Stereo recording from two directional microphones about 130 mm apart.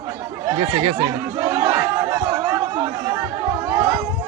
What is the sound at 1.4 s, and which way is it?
Chatter, 30° right (ahead or behind).